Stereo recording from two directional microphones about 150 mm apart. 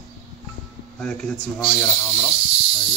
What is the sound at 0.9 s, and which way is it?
Speech, 5° left (ahead or behind).